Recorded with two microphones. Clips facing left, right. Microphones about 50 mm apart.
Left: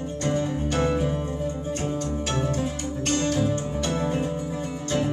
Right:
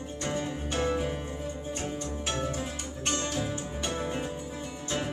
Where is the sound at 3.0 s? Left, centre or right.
Centre.